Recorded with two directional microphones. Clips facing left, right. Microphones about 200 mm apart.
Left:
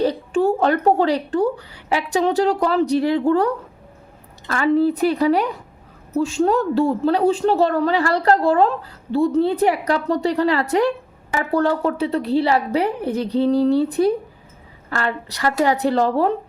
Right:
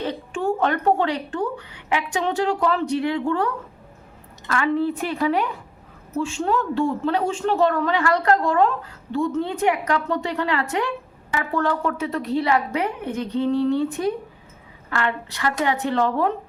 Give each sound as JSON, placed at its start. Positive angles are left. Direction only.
{"t": 0.0, "sound": "a woman's voice", "side_deg": 35}